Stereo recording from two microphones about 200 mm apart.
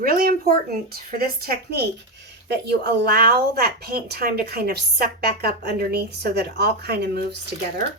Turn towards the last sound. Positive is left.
turn(degrees=-55)  # may be behind; listen again after turning